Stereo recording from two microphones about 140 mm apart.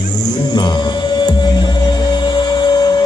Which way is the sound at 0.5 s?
30° left (ahead or behind).